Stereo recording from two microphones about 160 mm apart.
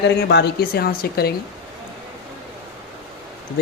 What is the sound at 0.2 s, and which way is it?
A woman's voice, 90° left.